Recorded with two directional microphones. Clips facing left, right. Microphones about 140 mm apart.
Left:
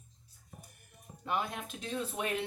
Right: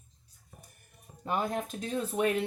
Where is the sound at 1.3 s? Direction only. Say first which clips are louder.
Right 4 dB; 40° right (ahead or behind).